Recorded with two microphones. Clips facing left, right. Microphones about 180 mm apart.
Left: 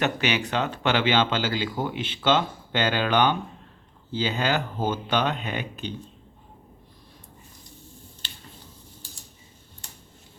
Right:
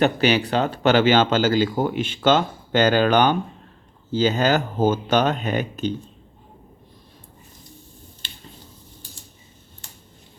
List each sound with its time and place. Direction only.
0.0 s speech: 35° right (ahead or behind)